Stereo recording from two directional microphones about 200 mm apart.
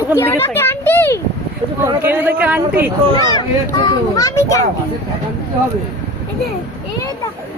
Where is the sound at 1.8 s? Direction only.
10° right (ahead or behind).